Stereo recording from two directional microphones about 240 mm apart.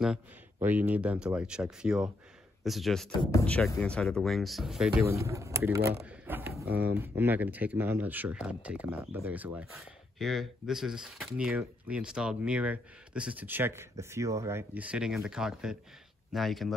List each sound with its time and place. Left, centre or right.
0.0 s speech: centre
3.1 s speech: centre
6.0 s a sound: centre
6.8 s speech: centre